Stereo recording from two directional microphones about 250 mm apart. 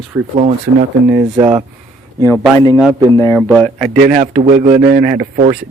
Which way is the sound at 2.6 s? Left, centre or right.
Centre.